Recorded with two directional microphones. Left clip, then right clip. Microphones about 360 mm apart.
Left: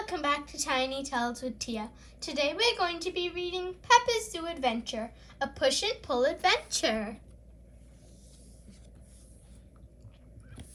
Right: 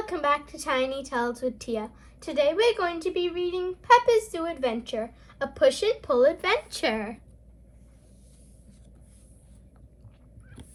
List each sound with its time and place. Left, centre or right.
0.1 s a woman's voice: centre